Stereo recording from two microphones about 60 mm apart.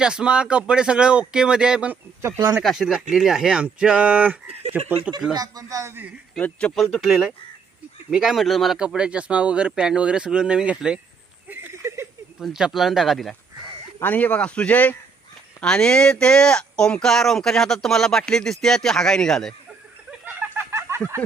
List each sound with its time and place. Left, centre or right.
0.0 s speech: centre
2.6 s speech: centre; by 5.1 s right
5.4 s speech: right
6.4 s speech: left
6.7 s speech: centre
8.8 s speech: centre
11.4 s a sound: right
11.7 s a sound: right
12.5 s speech: centre
14.0 s speech: left
15.6 s speech: centre
20.1 s a sound: centre
20.5 s chicken: right